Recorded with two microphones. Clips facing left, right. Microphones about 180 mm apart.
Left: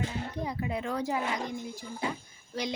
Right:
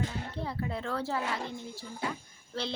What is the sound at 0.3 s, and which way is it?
Speech, 15° left (ahead or behind).